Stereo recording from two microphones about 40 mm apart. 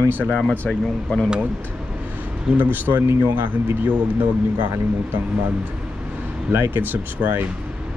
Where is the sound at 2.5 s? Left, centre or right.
Right.